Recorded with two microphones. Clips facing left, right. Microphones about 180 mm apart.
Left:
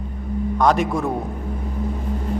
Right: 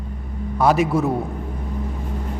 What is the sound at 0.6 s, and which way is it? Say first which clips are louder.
Speech: right 2 dB; 5° right (ahead or behind).